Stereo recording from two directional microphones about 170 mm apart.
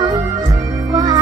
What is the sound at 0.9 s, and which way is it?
Music, 25° right (ahead or behind).